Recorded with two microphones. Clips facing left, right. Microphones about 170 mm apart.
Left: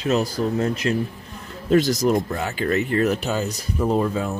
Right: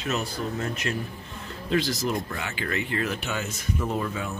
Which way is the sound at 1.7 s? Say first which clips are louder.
Left 8 dB; 45° left (ahead or behind).